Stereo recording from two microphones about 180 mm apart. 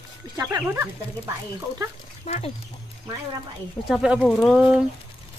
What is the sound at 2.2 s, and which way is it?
Speech, 35° left (ahead or behind).